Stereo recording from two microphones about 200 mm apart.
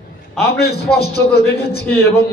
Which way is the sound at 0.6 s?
55° left (ahead or behind).